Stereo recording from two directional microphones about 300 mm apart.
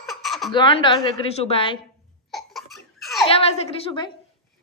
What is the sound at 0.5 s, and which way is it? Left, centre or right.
Speech, centre.